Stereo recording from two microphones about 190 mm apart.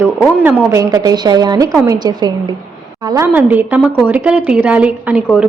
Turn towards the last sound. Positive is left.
turn(degrees=-5)  # may be behind; listen again after turning